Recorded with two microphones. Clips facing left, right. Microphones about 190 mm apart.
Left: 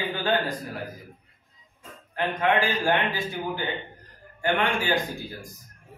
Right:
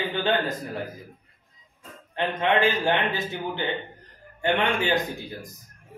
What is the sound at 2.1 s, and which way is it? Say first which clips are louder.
A man's voice: even; 25° right (ahead or behind).